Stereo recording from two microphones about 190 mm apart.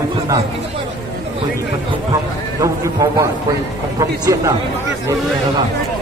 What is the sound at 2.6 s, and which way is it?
A man's voice, 15° right (ahead or behind).